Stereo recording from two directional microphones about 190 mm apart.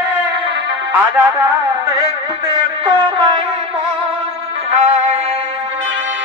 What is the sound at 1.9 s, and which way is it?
Music, 20° right (ahead or behind).